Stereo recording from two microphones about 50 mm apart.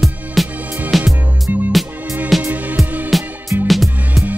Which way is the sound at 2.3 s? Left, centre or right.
Centre.